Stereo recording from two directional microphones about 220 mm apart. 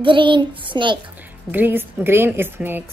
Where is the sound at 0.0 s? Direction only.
20° right (ahead or behind).